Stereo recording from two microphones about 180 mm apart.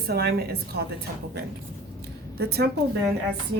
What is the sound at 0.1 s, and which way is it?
Speech, 65° right (ahead or behind).